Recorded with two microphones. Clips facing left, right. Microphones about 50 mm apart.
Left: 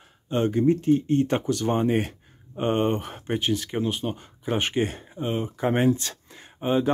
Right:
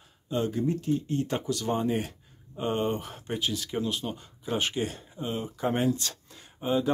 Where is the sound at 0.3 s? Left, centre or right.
Left.